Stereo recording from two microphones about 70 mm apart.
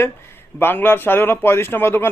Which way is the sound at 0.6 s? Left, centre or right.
Left.